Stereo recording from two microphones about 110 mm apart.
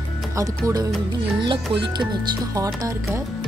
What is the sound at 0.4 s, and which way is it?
Speech, 30° right (ahead or behind).